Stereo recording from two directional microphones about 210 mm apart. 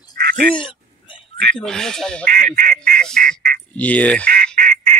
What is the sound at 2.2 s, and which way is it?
Speech, 40° right (ahead or behind).